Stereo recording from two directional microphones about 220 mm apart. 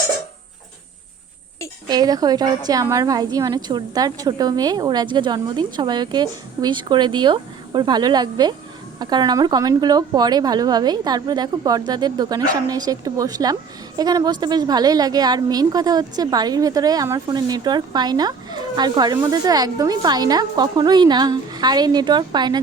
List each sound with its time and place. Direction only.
1.9 s a woman's voice: 15° right (ahead or behind)